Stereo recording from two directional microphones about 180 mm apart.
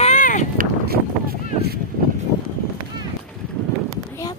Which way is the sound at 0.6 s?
55° right (ahead or behind).